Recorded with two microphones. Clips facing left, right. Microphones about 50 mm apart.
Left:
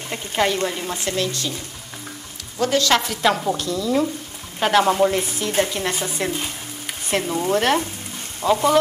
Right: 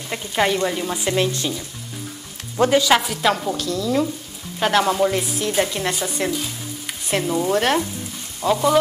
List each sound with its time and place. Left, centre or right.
0.1 s speech: centre
0.7 s frying: centre; by 1.5 s right
2.7 s speech: centre
8.4 s speech: left